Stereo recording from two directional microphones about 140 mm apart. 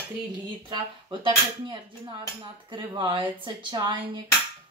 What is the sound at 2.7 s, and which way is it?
A woman's voice, 35° right (ahead or behind).